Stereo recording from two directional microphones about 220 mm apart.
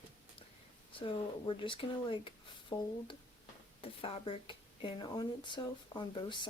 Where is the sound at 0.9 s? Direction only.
25° left (ahead or behind).